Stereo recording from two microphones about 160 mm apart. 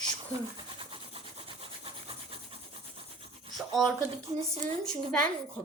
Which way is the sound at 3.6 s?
Centre (ahead or behind).